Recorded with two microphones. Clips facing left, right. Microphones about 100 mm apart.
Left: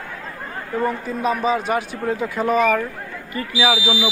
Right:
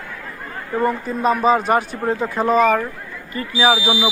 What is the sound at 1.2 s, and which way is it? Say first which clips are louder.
Speech: right 4 dB; 45° right (ahead or behind).